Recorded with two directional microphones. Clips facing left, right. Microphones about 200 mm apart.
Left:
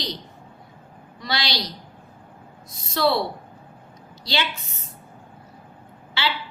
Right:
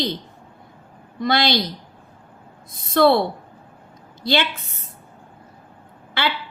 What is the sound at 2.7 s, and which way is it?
Speech, 55° right (ahead or behind).